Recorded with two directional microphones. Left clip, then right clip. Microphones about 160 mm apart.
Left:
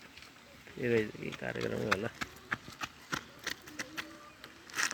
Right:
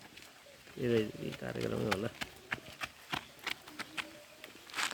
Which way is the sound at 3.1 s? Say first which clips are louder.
Even; 30° left (ahead or behind).